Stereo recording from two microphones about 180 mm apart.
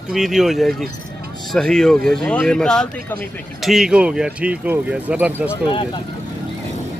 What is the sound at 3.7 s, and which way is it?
Speech, 5° right (ahead or behind).